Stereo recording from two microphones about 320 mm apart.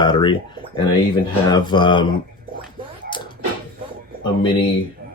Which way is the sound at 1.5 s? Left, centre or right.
Centre.